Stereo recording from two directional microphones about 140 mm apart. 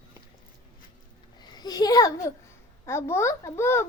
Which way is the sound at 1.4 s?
30° left (ahead or behind).